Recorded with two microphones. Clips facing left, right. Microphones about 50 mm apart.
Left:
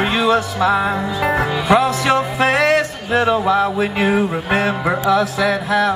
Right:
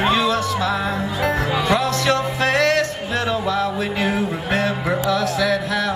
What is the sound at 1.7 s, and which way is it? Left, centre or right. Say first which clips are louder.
Music: left 5 dB; centre.